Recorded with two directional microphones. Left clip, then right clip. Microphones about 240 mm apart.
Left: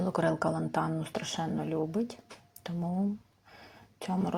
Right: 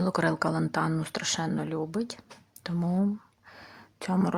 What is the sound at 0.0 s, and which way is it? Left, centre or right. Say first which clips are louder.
A woman's voice: right 2 dB; centre.